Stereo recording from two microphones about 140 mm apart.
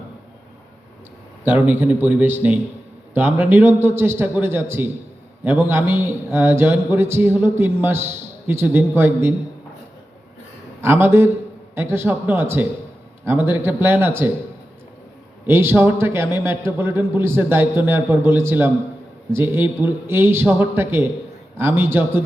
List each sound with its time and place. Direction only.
1.5 s a man's voice: 15° right (ahead or behind)
10.8 s a man's voice: 15° right (ahead or behind)
15.4 s a man's voice: 15° right (ahead or behind)